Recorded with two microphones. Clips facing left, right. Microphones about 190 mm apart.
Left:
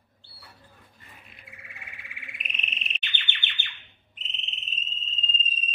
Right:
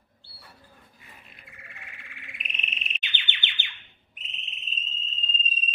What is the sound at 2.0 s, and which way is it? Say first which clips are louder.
Bird: left 1 dB; centre (ahead or behind).